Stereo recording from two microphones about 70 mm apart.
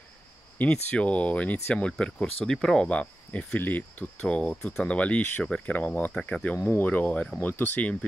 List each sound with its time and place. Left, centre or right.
0.6 s speech: centre